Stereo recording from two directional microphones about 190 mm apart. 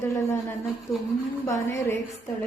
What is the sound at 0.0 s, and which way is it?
A woman's voice, 15° left (ahead or behind).